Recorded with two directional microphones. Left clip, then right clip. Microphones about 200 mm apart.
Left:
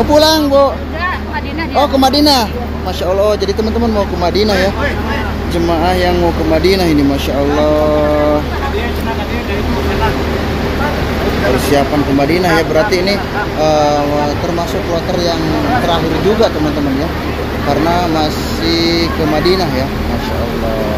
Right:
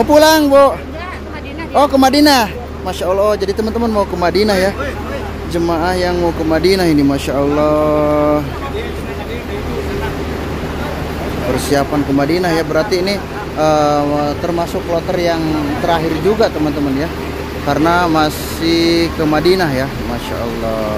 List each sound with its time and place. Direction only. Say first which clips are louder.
0.1 s speech: right 1 dB; 40° right (ahead or behind)
1.8 s speech: right 1 dB; 40° right (ahead or behind)
5.7 s speech: left 3 dB; 25° right (ahead or behind)
11.7 s speech: left 2 dB; 25° right (ahead or behind)
15.9 s speech: left 1 dB; 40° right (ahead or behind)
17.6 s speech: right 1 dB; 45° right (ahead or behind)